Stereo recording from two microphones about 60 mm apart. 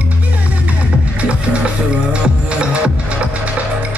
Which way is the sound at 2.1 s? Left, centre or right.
Centre.